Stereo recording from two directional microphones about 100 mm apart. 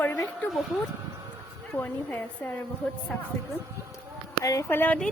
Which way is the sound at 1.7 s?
15° left (ahead or behind).